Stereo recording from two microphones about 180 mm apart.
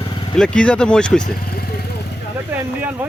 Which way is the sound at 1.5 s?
60° left (ahead or behind).